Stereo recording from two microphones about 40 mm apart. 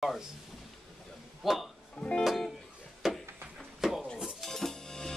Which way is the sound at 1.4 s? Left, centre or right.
Centre.